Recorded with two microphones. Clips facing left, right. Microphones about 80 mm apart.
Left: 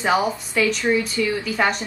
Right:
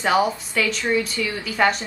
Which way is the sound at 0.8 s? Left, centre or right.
Centre.